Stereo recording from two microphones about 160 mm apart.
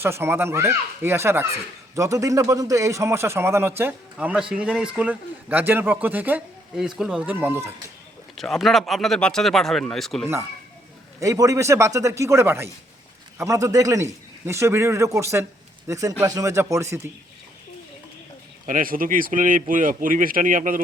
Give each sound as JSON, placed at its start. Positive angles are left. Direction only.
{"t": 0.0, "sound": "speech", "side_deg": -15}
{"t": 8.4, "sound": "speech", "side_deg": 0}
{"t": 11.2, "sound": "a man's voice", "side_deg": -20}
{"t": 18.6, "sound": "speech", "side_deg": -60}